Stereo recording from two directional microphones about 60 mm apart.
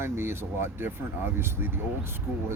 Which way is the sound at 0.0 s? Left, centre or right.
Right.